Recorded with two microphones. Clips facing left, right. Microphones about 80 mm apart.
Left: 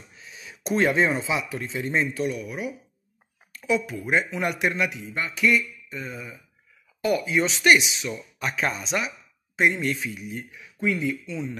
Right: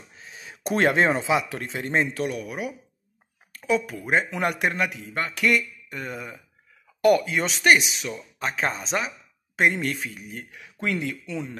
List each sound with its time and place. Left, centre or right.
0.1 s a sound: right
0.7 s speech: right
7.2 s speech: right
8.4 s speech: right
9.6 s speech: right
10.5 s speech: right